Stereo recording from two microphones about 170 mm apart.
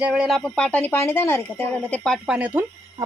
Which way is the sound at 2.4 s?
10° right (ahead or behind).